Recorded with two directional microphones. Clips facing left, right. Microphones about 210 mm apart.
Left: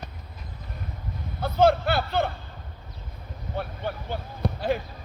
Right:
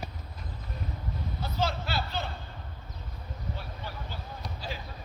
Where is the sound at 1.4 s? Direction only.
55° left (ahead or behind).